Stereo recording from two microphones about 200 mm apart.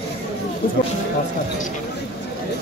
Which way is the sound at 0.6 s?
45° left (ahead or behind).